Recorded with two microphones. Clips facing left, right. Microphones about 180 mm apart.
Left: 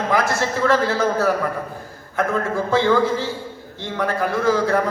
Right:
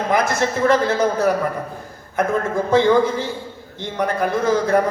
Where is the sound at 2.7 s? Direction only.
15° right (ahead or behind).